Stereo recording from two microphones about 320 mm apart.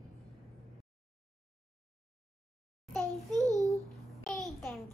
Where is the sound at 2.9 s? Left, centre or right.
Centre.